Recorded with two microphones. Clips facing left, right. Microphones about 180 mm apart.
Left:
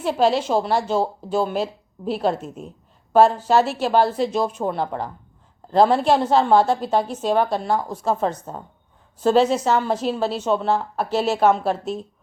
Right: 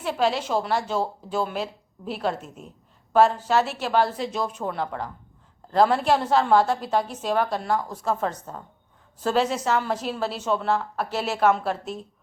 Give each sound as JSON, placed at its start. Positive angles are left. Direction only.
{"t": 0.0, "sound": "a woman's voice", "side_deg": 30}